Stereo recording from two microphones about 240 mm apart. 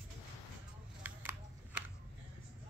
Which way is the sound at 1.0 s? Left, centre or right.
Centre.